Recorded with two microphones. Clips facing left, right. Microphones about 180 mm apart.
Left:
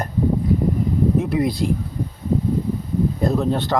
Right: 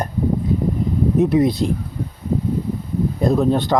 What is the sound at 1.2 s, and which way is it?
Speech, 20° right (ahead or behind).